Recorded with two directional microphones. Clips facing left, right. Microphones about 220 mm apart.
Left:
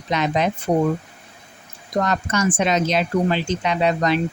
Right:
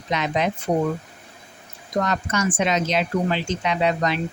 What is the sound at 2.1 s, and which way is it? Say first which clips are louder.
Speech: left 2 dB; 40° left (ahead or behind).